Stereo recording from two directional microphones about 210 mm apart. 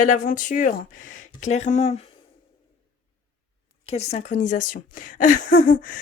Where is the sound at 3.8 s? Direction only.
30° left (ahead or behind).